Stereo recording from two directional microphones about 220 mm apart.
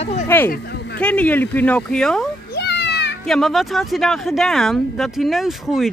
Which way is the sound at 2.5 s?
50° left (ahead or behind).